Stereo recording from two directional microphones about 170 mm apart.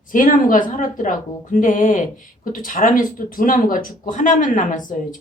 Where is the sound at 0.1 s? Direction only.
55° left (ahead or behind).